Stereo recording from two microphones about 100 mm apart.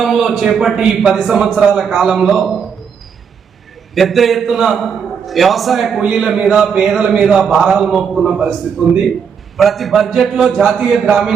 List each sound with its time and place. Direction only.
0.0 s a man's voice: centre (ahead or behind)
3.9 s a man's voice: centre (ahead or behind)
9.6 s a man's voice: centre (ahead or behind)